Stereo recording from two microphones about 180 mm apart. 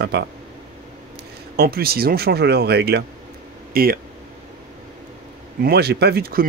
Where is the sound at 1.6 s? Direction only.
60° right (ahead or behind).